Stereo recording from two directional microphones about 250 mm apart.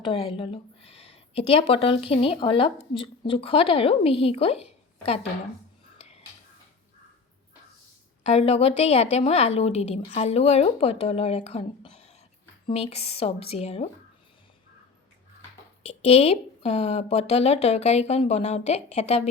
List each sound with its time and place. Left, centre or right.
0.0 s a woman's voice: left
6.0 s a sound: left
8.2 s a woman's voice: left
15.8 s a woman's voice: left